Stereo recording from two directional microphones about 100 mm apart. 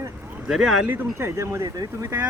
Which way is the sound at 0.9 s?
30° right (ahead or behind).